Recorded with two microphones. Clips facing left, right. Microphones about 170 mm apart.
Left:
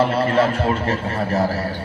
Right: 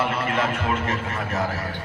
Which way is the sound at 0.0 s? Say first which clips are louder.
Left 7 dB; 35° left (ahead or behind).